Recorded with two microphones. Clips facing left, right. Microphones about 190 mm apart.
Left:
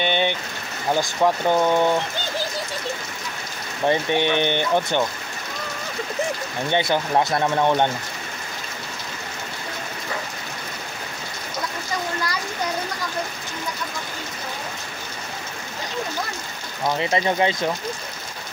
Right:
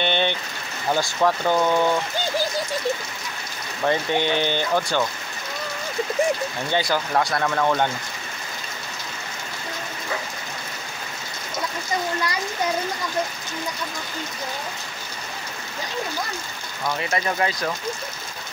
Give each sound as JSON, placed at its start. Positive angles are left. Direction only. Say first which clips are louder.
{"t": 0.0, "sound": "rain on surface", "louder": "left 1 dB", "side_deg": 10}
{"t": 0.9, "sound": "speech", "louder": "left 1 dB", "side_deg": 15}
{"t": 3.8, "sound": "speech", "louder": "left 2 dB", "side_deg": 20}
{"t": 6.7, "sound": "speech", "louder": "left 2 dB", "side_deg": 25}
{"t": 16.8, "sound": "speech", "louder": "left 4 dB", "side_deg": 25}